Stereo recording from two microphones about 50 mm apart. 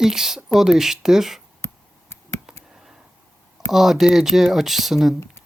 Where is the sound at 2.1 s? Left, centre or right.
Left.